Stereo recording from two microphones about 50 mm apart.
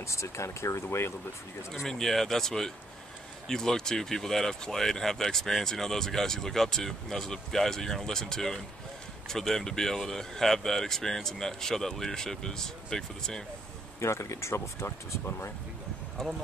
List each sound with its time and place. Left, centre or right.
0.0 s speech: left
0.8 s speech: left
1.9 s speech: centre
13.9 s speech: left
16.2 s speech: centre